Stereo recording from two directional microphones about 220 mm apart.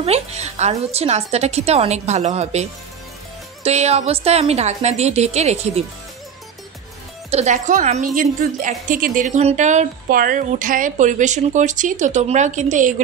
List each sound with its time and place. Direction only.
0.0 s a woman's voice: 30° right (ahead or behind)
7.2 s a woman's voice: 30° right (ahead or behind)